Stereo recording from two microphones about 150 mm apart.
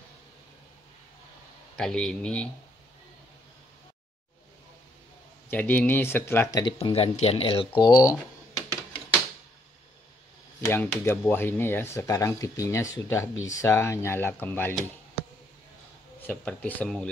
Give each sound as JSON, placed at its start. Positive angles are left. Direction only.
{"t": 1.8, "sound": "a man's voice", "side_deg": 5}
{"t": 5.5, "sound": "speech", "side_deg": 10}
{"t": 6.6, "sound": "speech", "side_deg": 40}
{"t": 10.7, "sound": "speech", "side_deg": 15}
{"t": 16.3, "sound": "speech", "side_deg": 10}